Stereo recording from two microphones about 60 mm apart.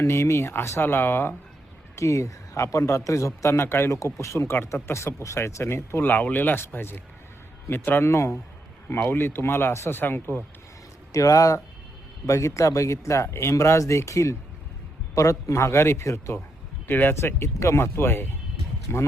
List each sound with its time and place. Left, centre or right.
0.0 s speech: left
2.0 s speech: left
4.0 s speech: left
6.1 s speech: left
8.0 s speech: left
8.9 s speech: left
11.1 s speech: left
12.2 s speech: left
16.8 s speech: left